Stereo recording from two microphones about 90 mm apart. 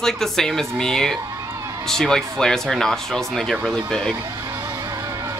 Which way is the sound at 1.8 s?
5° left (ahead or behind).